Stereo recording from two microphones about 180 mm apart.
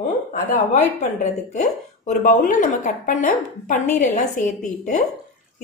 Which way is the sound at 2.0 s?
45° left (ahead or behind).